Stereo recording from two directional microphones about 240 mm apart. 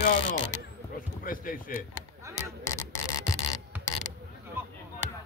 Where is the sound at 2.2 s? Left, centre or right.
Centre.